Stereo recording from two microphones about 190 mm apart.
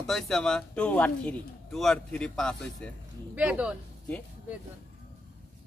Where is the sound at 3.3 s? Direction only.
5° right (ahead or behind).